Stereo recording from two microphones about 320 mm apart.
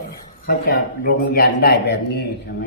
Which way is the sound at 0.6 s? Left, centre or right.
Left.